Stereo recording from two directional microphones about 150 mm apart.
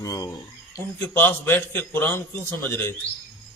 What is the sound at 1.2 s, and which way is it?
A man's voice, 15° left (ahead or behind).